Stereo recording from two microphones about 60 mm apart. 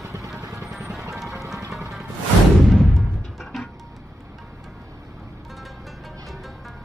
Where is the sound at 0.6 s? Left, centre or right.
Centre.